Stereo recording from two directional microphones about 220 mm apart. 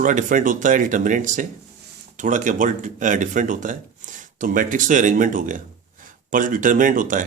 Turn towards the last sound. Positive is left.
turn(degrees=-35)  # may be behind; listen again after turning